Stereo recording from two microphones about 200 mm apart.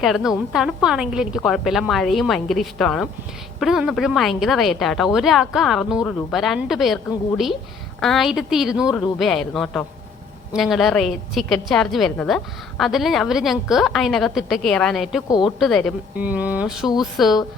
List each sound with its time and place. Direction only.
0.0 s a woman's voice: centre (ahead or behind)
8.0 s a woman's voice: centre (ahead or behind)
15.3 s a woman's voice: 20° left (ahead or behind)
15.5 s a woman's voice: centre (ahead or behind)
16.1 s a woman's voice: 10° right (ahead or behind)